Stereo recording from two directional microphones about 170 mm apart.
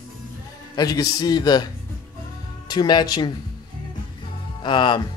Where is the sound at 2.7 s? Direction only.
25° left (ahead or behind).